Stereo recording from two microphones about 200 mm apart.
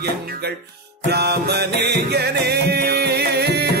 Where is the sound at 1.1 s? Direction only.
55° right (ahead or behind).